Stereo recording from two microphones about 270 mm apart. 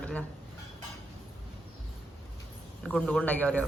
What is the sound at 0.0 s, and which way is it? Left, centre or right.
Cutlery, centre.